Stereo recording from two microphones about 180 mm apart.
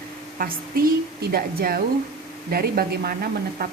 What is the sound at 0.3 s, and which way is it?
A woman's voice, 55° right (ahead or behind).